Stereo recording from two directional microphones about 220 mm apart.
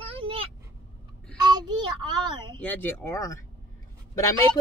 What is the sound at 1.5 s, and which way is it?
Child singing, 20° right (ahead or behind).